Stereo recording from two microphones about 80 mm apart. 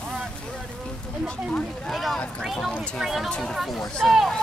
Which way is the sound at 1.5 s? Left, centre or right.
Centre.